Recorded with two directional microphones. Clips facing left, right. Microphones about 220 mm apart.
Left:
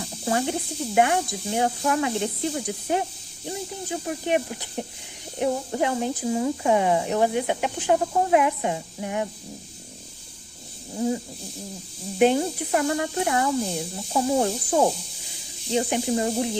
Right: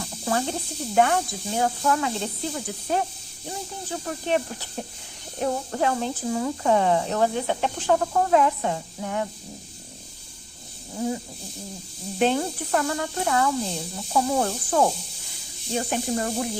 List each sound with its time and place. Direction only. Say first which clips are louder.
0.3 s speech: left 2 dB; 15° left (ahead or behind)
12.2 s speech: left 3 dB; 15° left (ahead or behind)